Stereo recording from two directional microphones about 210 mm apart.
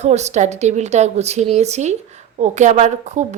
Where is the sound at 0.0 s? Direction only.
35° right (ahead or behind).